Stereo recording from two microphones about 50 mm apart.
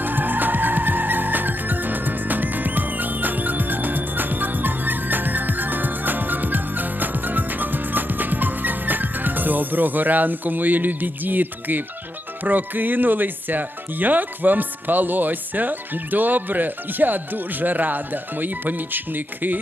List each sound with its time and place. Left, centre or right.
0.0 s music: right
12.4 s speech: right